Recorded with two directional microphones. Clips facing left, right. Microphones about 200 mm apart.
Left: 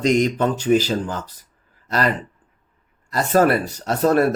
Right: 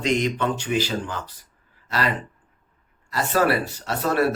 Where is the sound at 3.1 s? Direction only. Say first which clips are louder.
Left 4 dB; 45° left (ahead or behind).